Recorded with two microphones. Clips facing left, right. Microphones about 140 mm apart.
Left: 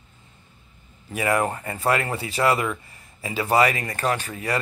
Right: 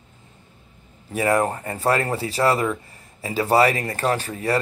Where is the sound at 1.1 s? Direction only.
35° right (ahead or behind).